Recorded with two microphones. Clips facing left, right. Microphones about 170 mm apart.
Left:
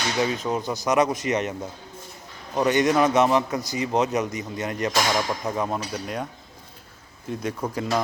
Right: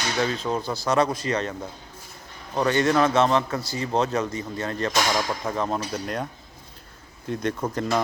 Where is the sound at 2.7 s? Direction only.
15° left (ahead or behind).